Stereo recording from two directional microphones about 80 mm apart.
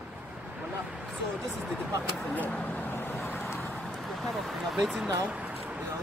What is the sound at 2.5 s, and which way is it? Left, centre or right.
Vehicle, centre.